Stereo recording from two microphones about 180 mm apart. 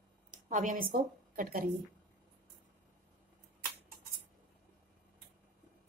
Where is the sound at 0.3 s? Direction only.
45° right (ahead or behind).